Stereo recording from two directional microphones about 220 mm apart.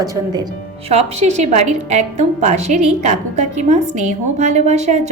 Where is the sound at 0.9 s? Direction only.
30° right (ahead or behind).